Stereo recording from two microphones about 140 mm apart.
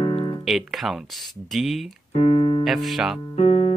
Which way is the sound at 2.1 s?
40° left (ahead or behind).